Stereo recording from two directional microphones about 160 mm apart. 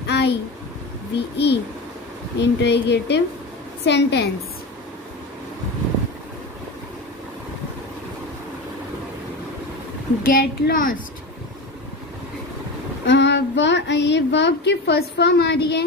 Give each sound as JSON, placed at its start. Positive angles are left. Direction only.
{"t": 0.0, "sound": "a sound", "side_deg": 90}
{"t": 1.1, "sound": "speech", "side_deg": 90}
{"t": 10.2, "sound": "a child's voice", "side_deg": 65}
{"t": 13.0, "sound": "speech", "side_deg": 90}